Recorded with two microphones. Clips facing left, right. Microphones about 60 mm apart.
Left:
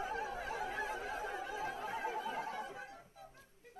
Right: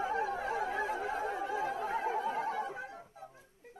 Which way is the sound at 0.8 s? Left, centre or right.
Right.